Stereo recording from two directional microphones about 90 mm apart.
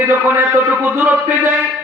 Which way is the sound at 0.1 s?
20° right (ahead or behind).